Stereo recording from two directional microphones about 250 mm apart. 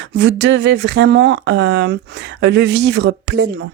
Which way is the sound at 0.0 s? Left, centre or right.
Right.